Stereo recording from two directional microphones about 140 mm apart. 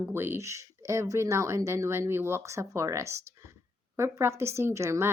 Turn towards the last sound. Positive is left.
turn(degrees=-20)  # may be behind; listen again after turning